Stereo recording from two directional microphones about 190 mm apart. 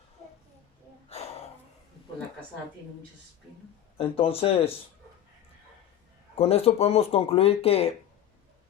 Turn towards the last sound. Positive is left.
turn(degrees=30)  # may be behind; listen again after turning